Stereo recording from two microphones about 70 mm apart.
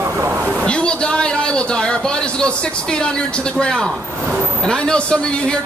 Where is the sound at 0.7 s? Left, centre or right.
Centre.